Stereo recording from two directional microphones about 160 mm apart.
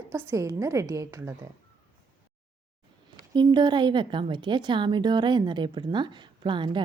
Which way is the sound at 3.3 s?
25° right (ahead or behind).